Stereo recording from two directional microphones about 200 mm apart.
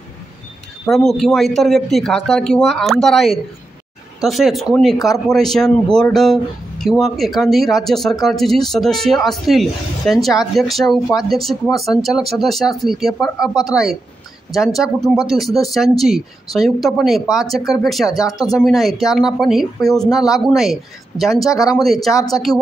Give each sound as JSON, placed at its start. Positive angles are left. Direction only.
{"t": 0.8, "sound": "speech", "side_deg": 0}
{"t": 14.8, "sound": "speech", "side_deg": 0}
{"t": 18.1, "sound": "speech", "side_deg": 20}
{"t": 18.5, "sound": "speech", "side_deg": 0}
{"t": 21.5, "sound": "speech", "side_deg": 15}
{"t": 21.8, "sound": "speech", "side_deg": 0}
{"t": 22.5, "sound": "speech", "side_deg": 20}